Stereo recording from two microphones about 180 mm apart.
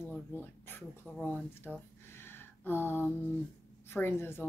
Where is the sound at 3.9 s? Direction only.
10° left (ahead or behind).